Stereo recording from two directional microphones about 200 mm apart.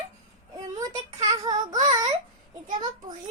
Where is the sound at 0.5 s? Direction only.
15° right (ahead or behind).